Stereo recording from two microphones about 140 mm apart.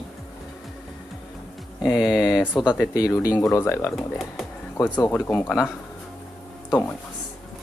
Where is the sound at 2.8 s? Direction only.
20° left (ahead or behind).